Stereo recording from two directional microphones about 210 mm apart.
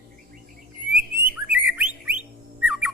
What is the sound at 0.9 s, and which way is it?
Bird, 45° right (ahead or behind).